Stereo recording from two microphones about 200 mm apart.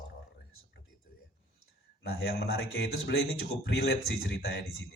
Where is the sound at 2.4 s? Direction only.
55° left (ahead or behind).